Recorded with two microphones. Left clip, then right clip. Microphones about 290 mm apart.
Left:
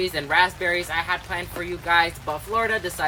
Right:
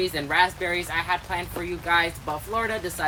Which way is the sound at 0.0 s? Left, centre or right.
Centre.